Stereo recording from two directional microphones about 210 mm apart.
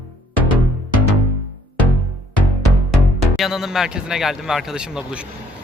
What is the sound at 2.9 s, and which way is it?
Speech, centre (ahead or behind).